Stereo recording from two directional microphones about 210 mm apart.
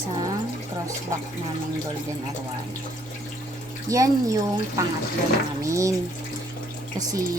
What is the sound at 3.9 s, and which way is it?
A woman's voice, 15° right (ahead or behind).